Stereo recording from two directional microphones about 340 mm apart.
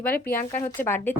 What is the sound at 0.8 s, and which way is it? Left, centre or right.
Speech, centre.